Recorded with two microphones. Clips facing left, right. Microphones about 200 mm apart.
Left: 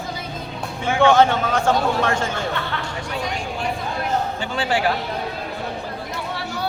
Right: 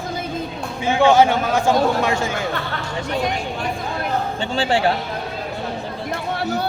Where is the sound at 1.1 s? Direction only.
10° right (ahead or behind).